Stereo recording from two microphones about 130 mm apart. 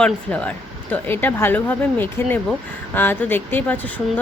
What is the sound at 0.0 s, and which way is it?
A woman's voice, 10° left (ahead or behind).